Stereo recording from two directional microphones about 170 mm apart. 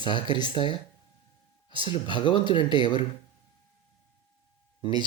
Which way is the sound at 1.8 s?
30° left (ahead or behind).